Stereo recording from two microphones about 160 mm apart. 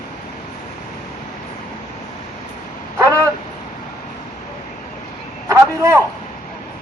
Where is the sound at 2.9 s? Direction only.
20° right (ahead or behind).